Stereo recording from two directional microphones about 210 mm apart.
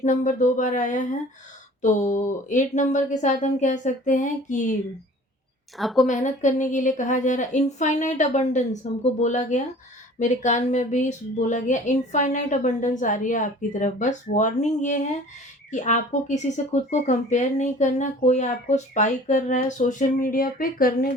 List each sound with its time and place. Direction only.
0.0 s speech: 35° left (ahead or behind)
5.7 s a woman's voice: centre (ahead or behind)
6.1 s speech: 35° left (ahead or behind)